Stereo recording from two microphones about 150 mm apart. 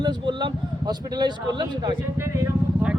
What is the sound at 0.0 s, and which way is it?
Speech, 30° right (ahead or behind).